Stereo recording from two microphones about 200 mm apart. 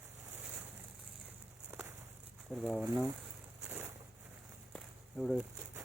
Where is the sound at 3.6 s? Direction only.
10° right (ahead or behind).